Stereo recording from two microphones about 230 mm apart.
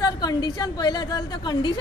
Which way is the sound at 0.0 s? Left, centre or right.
Centre.